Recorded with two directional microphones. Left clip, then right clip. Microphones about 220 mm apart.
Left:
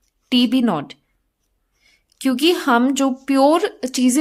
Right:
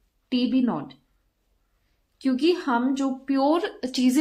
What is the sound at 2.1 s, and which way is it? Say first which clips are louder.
Speech: left 5 dB; 40° left (ahead or behind).